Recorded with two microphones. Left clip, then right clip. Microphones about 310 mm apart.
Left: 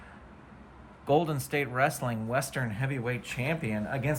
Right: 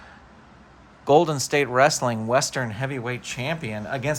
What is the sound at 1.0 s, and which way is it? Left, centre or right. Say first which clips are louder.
Speech: right 9 dB; centre.